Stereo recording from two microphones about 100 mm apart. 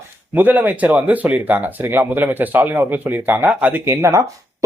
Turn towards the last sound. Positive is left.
turn(degrees=-30)  # may be behind; listen again after turning